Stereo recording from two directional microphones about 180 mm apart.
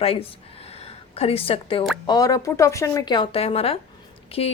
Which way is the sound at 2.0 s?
20° left (ahead or behind).